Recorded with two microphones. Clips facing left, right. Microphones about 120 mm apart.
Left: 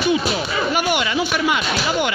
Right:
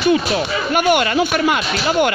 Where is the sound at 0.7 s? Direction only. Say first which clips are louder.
Right 7 dB; 50° right (ahead or behind).